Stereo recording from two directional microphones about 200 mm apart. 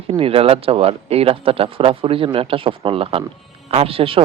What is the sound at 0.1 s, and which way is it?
Speech, 30° right (ahead or behind).